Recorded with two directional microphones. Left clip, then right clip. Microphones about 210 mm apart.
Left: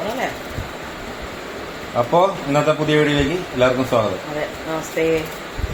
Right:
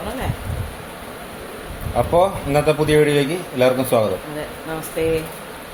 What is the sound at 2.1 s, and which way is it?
A man's voice, 30° right (ahead or behind).